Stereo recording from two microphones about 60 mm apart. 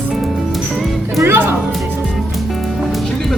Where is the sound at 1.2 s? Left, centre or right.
Right.